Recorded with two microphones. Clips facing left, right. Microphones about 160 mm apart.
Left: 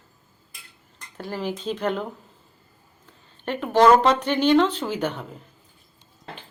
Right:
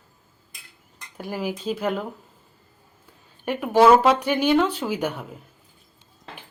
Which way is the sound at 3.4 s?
10° right (ahead or behind).